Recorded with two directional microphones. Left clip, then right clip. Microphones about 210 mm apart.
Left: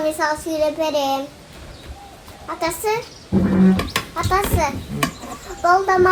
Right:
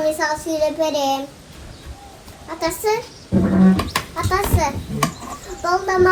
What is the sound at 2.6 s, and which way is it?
Speech, 15° left (ahead or behind).